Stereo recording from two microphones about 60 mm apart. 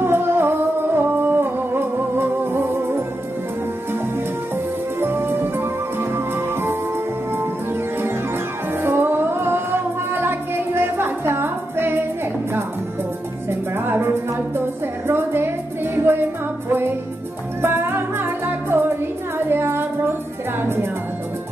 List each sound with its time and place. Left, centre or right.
0.0 s music: right
5.0 s music: right
8.8 s music: right
13.5 s music: right